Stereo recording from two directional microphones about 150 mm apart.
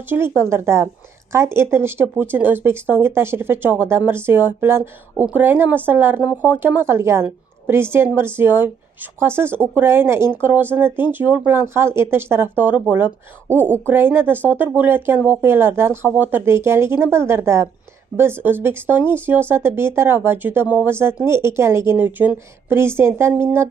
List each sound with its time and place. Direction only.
0.1 s speech: 15° right (ahead or behind)